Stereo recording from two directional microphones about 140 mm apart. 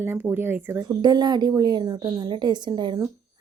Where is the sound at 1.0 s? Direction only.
30° right (ahead or behind).